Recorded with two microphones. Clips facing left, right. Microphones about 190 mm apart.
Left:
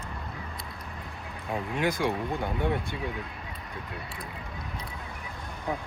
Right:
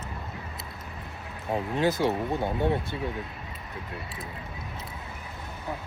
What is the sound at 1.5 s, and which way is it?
Speech, 20° right (ahead or behind).